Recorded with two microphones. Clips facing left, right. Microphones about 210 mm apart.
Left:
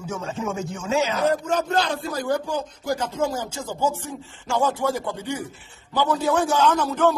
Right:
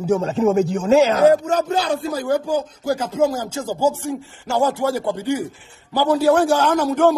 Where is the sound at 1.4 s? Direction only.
10° right (ahead or behind).